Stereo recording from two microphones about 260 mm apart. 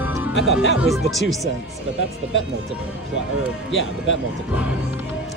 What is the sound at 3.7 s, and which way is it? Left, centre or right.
Speech, left.